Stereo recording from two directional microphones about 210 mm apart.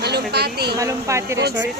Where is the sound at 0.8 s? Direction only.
15° right (ahead or behind).